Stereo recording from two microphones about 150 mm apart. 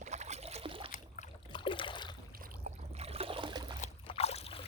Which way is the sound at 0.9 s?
55° left (ahead or behind).